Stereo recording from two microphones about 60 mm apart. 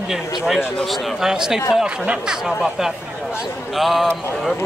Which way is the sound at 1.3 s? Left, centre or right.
Centre.